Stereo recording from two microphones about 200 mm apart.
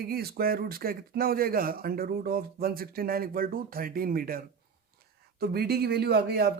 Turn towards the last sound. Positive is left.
turn(degrees=-50)  # may be behind; listen again after turning